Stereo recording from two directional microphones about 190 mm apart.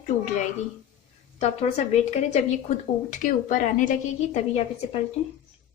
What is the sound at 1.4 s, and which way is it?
Speech, 35° left (ahead or behind).